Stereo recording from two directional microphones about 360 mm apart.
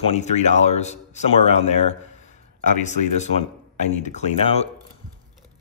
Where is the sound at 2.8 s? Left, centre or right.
Centre.